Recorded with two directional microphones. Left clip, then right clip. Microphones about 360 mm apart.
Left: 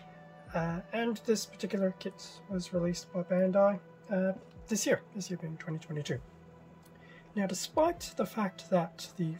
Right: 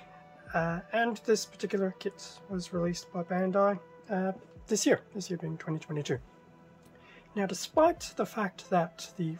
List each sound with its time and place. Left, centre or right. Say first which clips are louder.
0.5 s speech: right 4 dB; centre
7.3 s speech: right 3 dB; centre